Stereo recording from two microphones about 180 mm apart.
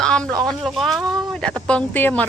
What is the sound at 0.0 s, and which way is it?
Speech, 5° left (ahead or behind).